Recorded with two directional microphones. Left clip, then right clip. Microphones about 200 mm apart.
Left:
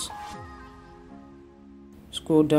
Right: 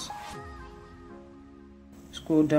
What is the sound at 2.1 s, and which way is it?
Music, 25° left (ahead or behind).